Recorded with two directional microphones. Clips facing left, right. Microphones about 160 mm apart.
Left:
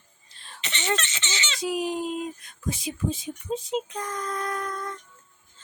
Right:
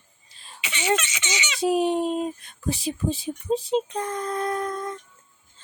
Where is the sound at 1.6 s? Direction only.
30° right (ahead or behind).